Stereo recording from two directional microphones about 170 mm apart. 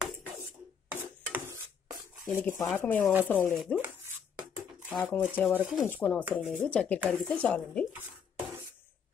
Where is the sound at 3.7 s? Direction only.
10° right (ahead or behind).